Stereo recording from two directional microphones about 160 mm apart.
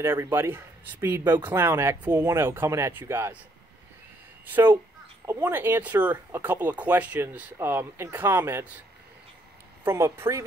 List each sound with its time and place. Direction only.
0.0 s speech: 15° right (ahead or behind)
4.5 s speech: 10° right (ahead or behind)
9.8 s speech: 15° right (ahead or behind)